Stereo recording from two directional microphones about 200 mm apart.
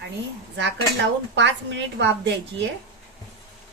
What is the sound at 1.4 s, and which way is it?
Speech, 65° right (ahead or behind).